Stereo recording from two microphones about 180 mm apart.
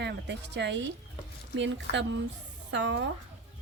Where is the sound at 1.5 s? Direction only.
90° right.